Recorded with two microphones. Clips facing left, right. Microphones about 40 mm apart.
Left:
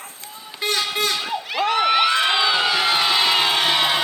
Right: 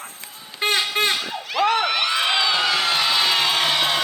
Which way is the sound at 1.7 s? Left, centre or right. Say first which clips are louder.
Left 3 dB; centre.